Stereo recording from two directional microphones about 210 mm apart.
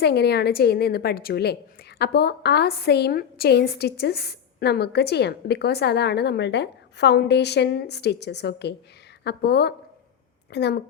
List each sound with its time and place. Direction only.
0.0 s a woman's voice: 50° left (ahead or behind)